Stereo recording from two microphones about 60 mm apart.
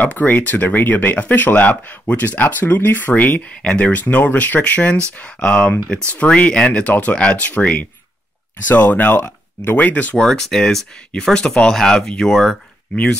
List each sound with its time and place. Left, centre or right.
0.0 s speech: left
6.9 s speech: left
10.2 s speech: centre
12.9 s speech: centre